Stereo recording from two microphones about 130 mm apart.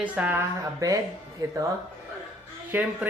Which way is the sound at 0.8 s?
25° right (ahead or behind).